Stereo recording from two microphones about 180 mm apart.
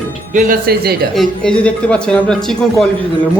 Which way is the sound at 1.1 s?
Centre (ahead or behind).